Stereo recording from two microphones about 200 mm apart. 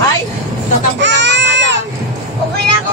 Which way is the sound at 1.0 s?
60° right (ahead or behind).